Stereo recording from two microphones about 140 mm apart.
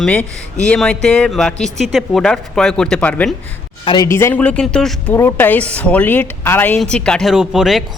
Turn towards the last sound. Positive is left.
turn(degrees=0)  # may be behind; listen again after turning